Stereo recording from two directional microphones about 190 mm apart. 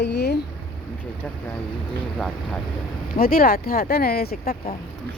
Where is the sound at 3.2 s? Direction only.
50° left (ahead or behind).